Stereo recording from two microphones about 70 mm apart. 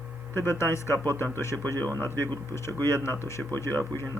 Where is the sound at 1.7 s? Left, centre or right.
Right.